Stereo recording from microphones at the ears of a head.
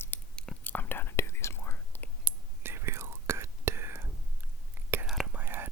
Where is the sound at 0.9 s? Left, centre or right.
Left.